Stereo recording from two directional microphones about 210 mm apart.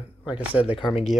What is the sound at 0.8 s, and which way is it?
Speech, 30° left (ahead or behind).